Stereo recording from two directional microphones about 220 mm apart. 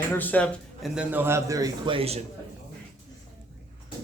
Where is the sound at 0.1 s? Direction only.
10° left (ahead or behind); by 2.2 s 25° right (ahead or behind).